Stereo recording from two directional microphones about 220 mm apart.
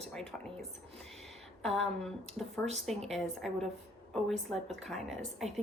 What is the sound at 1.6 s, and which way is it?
Speech, centre (ahead or behind).